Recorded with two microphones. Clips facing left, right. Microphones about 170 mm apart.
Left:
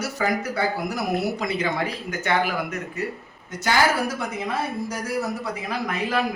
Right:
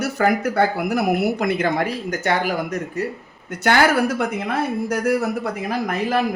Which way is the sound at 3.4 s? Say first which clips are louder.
Right 4 dB; 60° right (ahead or behind).